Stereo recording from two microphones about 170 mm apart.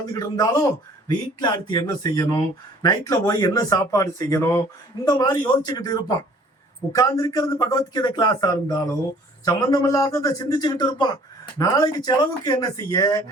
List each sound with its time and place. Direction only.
0.0 s a man's voice: 20° left (ahead or behind)